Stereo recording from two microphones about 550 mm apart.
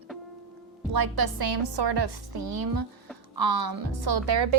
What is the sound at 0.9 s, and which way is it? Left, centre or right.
A woman's voice, right.